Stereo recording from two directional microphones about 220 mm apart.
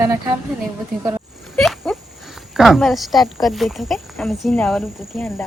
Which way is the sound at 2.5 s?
Centre (ahead or behind).